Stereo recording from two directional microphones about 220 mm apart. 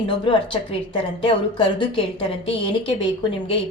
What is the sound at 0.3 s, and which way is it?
Speech, 25° left (ahead or behind).